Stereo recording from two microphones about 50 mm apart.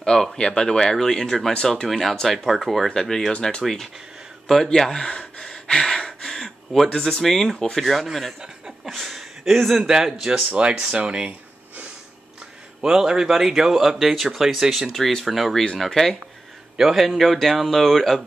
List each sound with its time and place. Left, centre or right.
0.0 s speech: centre
1.9 s speech: centre
3.6 s speech: centre
5.4 s a sound: centre
6.9 s speech: centre
10.5 s speech: right
12.8 s speech: centre
14.9 s speech: centre
16.7 s speech: centre